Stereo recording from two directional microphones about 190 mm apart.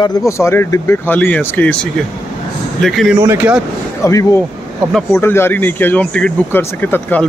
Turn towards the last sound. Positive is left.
turn(degrees=10)  # may be behind; listen again after turning